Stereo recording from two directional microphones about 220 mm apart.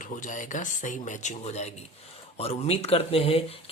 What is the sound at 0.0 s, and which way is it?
Speech, 35° left (ahead or behind).